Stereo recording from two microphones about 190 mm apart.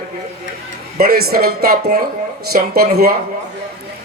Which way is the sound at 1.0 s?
55° right (ahead or behind).